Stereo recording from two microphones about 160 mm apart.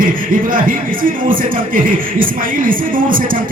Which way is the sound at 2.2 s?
60° right (ahead or behind).